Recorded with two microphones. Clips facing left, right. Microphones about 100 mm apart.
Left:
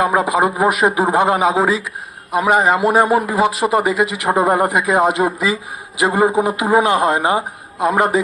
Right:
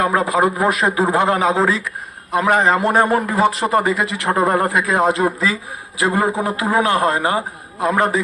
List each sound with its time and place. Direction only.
0.0 s a man's voice: 15° left (ahead or behind)